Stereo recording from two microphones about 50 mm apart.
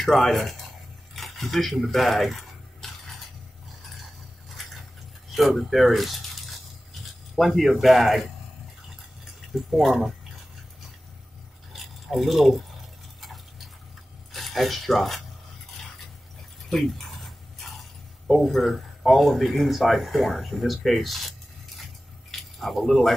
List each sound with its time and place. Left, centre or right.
0.0 s speech: centre
1.1 s a sound: centre
4.5 s a sound: centre
9.5 s speech: centre
11.7 s drip: centre
13.2 s tick-tock: centre
14.3 s speech: centre
16.6 s dog: centre
18.2 s speech: centre
22.3 s a sound: centre